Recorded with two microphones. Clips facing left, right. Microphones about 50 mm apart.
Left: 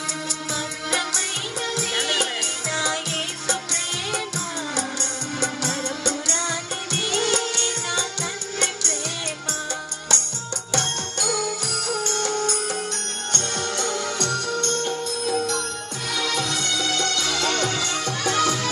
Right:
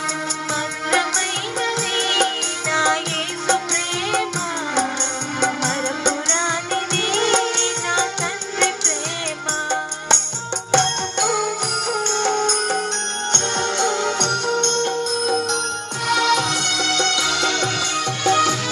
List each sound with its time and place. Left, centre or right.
0.5 s music: right
5.4 s music: right